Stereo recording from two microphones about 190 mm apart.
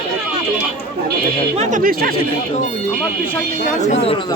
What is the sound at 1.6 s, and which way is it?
Speech, 40° right (ahead or behind).